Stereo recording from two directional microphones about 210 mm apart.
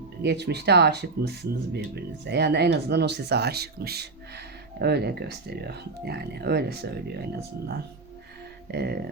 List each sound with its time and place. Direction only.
0.2 s speech: 55° right (ahead or behind)